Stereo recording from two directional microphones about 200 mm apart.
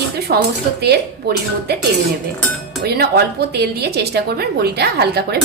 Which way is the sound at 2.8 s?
55° right (ahead or behind).